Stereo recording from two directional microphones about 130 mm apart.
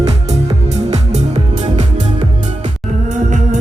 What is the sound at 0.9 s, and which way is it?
Music, 55° right (ahead or behind).